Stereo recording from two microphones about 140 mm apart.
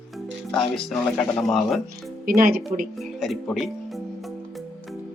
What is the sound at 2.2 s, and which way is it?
Speech, 90° right.